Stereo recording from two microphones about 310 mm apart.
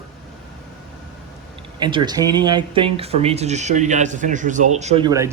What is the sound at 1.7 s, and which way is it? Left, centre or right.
Speech, centre.